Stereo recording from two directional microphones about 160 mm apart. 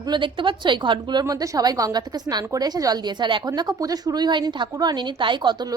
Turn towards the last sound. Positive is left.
turn(degrees=-30)  # may be behind; listen again after turning